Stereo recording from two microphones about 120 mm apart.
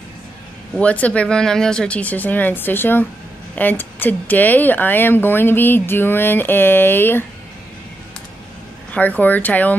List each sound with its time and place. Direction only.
0.7 s speech: 10° left (ahead or behind)
8.9 s speech: 15° left (ahead or behind)